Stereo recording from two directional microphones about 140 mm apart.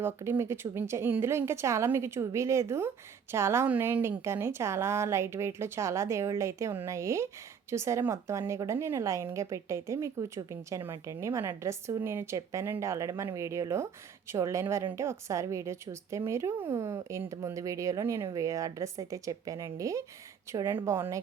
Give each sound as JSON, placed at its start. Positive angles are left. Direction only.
{"t": 0.0, "sound": "a woman's voice", "side_deg": -20}